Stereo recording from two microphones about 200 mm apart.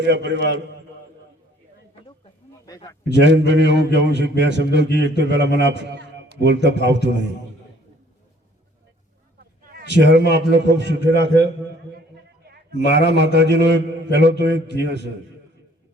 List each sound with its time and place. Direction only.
0.0 s a man's voice: 60° right (ahead or behind)
2.6 s a sound: 15° left (ahead or behind)
3.0 s a man's voice: 60° right (ahead or behind)
9.6 s a man's voice: 60° right (ahead or behind)